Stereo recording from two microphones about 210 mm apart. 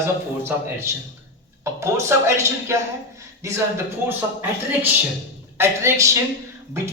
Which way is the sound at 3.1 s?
15° right (ahead or behind).